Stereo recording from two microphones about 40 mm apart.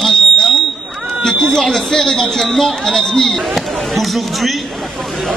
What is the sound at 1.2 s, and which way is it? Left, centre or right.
A man's voice, centre.